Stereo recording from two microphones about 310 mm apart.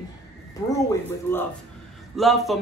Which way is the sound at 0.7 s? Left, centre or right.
Centre.